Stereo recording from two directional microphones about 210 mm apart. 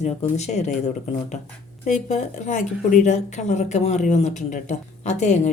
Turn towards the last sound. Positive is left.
turn(degrees=35)  # may be behind; listen again after turning